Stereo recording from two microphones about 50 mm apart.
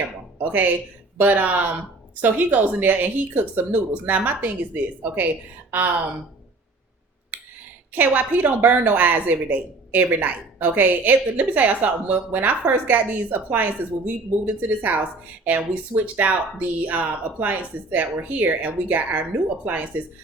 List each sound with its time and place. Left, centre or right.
0.3 s a woman's voice: right
7.3 s a sound: right
7.9 s a woman's voice: right